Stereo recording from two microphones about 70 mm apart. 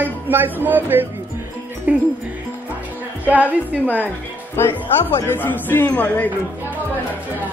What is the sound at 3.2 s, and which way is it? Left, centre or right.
Speech, right.